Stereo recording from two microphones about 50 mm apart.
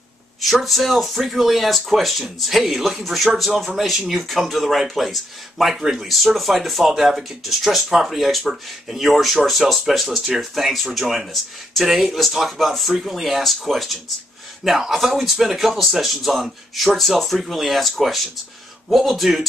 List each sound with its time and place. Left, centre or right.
0.4 s a man's voice: centre